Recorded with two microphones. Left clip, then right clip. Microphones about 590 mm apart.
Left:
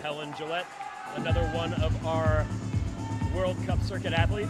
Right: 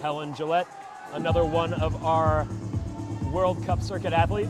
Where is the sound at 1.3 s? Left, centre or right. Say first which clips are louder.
Right 7 dB; right.